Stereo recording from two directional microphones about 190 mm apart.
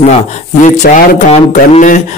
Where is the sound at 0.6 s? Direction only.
40° left (ahead or behind).